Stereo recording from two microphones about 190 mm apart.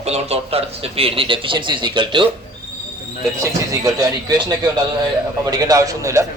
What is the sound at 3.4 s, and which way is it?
A man's voice, 20° right (ahead or behind).